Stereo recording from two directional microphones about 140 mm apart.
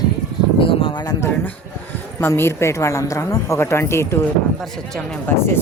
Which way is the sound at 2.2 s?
15° left (ahead or behind).